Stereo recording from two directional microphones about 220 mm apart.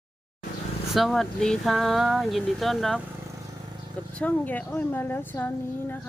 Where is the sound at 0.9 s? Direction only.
Centre (ahead or behind).